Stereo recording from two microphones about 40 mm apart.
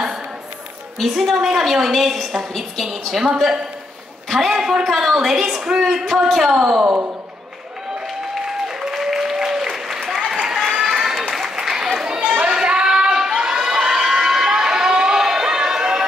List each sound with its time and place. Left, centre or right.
0.9 s a woman's voice: centre
4.3 s a woman's voice: centre
6.5 s speech: centre
8.5 s applause: centre
10.8 s a sound: centre
12.5 s child singing: centre
13.4 s crowd: centre